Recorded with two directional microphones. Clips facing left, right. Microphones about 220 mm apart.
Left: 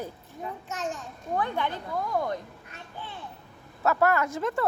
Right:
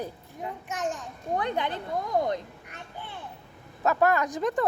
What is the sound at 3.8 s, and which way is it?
Speech, 15° right (ahead or behind).